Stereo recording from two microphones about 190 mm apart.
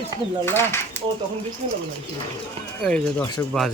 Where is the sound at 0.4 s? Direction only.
10° left (ahead or behind).